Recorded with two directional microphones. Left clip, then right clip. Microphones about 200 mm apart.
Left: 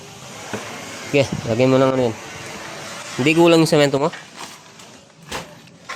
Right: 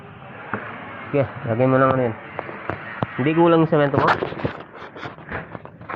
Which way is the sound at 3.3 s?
60° left (ahead or behind).